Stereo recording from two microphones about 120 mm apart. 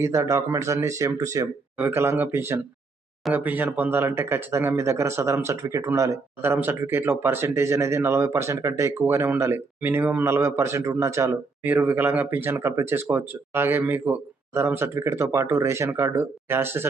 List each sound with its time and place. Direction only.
0.0 s speech: 25° right (ahead or behind)
11.6 s speech: 15° right (ahead or behind)